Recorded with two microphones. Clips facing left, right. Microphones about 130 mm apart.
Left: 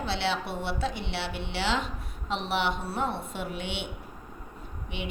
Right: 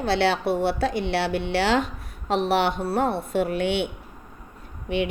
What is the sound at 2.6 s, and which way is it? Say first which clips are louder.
A woman's voice: right 6 dB; 70° right (ahead or behind).